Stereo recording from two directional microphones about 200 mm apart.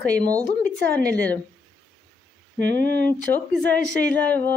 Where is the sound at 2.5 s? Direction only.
60° right (ahead or behind).